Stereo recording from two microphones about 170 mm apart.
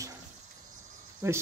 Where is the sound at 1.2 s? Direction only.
15° right (ahead or behind).